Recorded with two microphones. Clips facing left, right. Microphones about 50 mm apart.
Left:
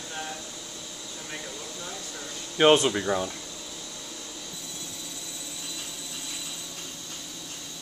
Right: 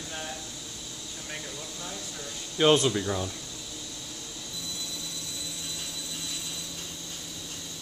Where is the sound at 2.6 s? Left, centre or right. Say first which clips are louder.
Left 2 dB; left.